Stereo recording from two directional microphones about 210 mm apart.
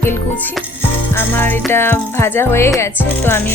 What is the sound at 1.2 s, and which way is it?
Music, 10° left (ahead or behind).